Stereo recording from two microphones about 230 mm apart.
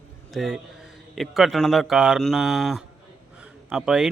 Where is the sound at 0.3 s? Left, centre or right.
Centre.